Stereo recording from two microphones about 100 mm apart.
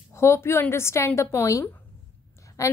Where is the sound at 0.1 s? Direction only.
25° left (ahead or behind).